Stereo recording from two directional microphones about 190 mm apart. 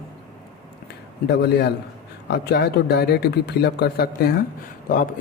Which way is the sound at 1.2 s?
60° left (ahead or behind).